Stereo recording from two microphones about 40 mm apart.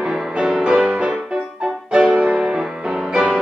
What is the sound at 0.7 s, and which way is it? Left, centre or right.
Music, right.